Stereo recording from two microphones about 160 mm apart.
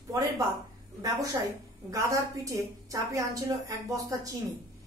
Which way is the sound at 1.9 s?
20° right (ahead or behind).